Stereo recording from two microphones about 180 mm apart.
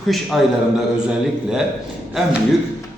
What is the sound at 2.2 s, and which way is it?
Speech, centre (ahead or behind).